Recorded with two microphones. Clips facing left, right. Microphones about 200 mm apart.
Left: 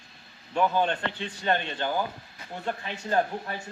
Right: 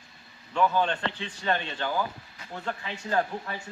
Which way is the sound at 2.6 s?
20° left (ahead or behind).